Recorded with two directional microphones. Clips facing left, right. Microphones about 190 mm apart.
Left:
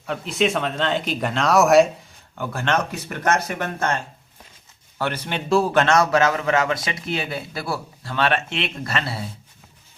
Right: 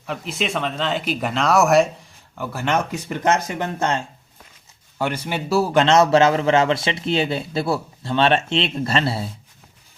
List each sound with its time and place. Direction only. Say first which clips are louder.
0.0 s speech: left 4 dB; centre (ahead or behind)
5.8 s a man's voice: right 3 dB; 25° right (ahead or behind)